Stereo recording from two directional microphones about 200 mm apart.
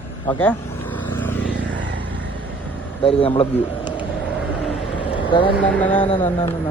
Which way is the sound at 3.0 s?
30° left (ahead or behind).